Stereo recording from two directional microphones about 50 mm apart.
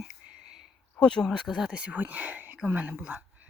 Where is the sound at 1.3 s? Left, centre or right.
Centre.